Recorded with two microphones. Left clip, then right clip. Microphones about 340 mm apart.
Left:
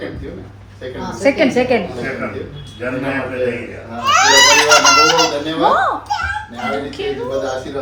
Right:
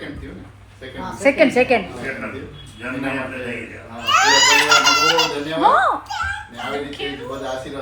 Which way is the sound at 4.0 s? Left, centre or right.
Left.